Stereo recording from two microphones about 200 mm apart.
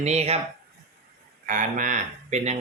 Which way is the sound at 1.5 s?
40° right (ahead or behind).